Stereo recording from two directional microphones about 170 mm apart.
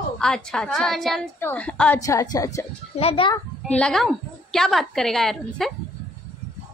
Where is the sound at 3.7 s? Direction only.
5° left (ahead or behind).